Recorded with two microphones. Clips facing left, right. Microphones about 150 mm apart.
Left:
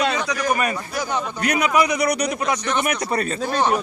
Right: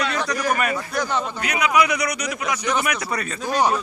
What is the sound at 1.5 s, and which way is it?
A man's voice, 40° left (ahead or behind).